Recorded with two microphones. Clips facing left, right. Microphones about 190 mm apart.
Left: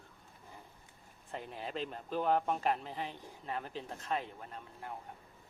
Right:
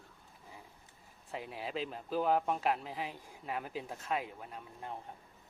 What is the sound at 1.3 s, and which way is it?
Speech, 5° right (ahead or behind).